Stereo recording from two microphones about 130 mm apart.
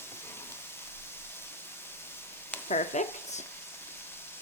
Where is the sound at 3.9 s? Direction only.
15° left (ahead or behind).